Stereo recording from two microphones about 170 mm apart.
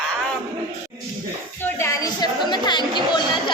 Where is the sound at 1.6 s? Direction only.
15° left (ahead or behind).